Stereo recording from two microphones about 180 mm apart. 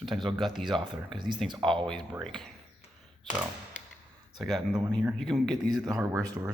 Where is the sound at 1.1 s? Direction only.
25° right (ahead or behind).